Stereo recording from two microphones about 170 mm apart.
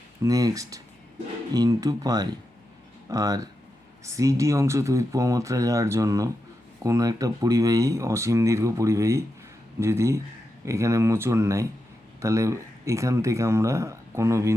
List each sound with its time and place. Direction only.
0.2 s speech: 20° right (ahead or behind)